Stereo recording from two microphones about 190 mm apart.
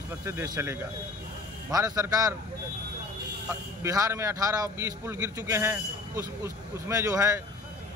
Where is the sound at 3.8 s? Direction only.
15° right (ahead or behind).